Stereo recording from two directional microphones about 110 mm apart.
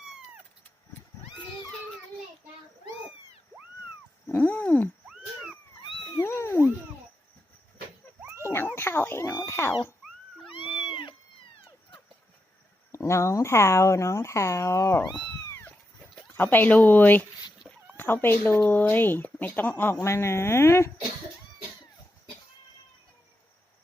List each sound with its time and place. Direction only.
4.3 s a sound: 20° left (ahead or behind)
5.0 s cat: 5° right (ahead or behind)
5.8 s cat: 50° left (ahead or behind)
6.2 s cat: 25° left (ahead or behind)
8.2 s a sound: 20° right (ahead or behind)
8.7 s cat: 20° left (ahead or behind)
9.5 s a sound: 20° left (ahead or behind)
10.8 s cat: 50° left (ahead or behind)
12.9 s speech: 25° left (ahead or behind)
15.4 s cat: 25° left (ahead or behind)
16.2 s speech: 20° left (ahead or behind)